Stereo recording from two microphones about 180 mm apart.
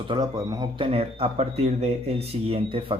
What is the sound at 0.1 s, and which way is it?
Speech, 20° right (ahead or behind).